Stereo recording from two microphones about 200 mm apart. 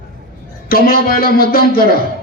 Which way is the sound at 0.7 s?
50° left (ahead or behind).